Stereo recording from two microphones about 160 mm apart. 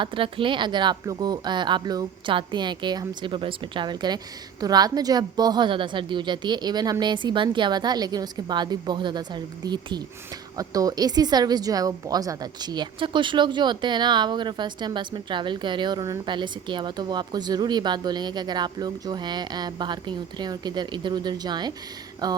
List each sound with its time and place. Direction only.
0.0 s a woman's voice: 35° right (ahead or behind)